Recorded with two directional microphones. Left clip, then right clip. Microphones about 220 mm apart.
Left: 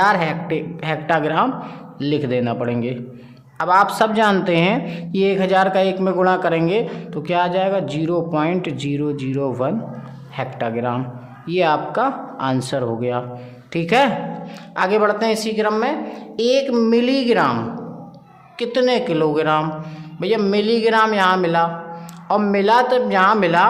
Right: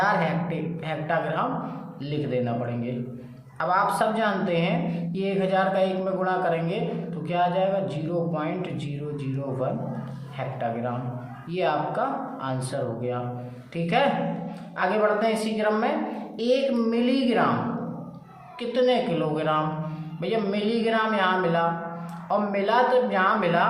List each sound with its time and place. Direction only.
0.0 s speech: 50° left (ahead or behind)
18.6 s speech: 50° left (ahead or behind)